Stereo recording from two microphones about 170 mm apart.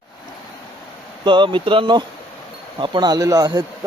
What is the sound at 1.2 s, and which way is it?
Speech, 30° right (ahead or behind).